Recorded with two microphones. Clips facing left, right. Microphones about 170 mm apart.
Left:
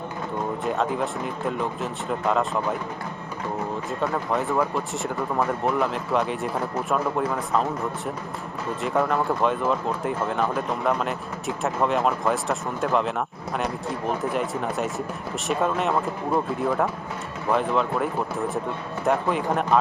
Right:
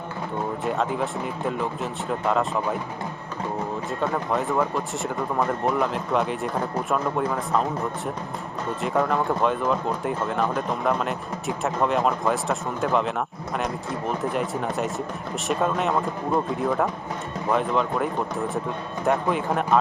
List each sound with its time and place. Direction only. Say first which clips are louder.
0.6 s speech: even; centre (ahead or behind)
4.0 s speech: even; centre (ahead or behind)